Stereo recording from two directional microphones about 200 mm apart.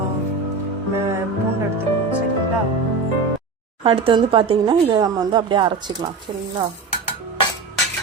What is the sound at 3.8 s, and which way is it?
Speech, 25° right (ahead or behind).